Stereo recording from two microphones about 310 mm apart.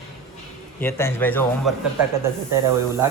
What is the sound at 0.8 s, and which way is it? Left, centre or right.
Speech, centre.